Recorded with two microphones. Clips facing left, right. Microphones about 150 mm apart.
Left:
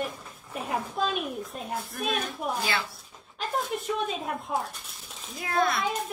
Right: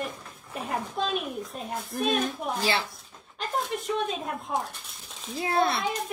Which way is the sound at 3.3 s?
Centre (ahead or behind).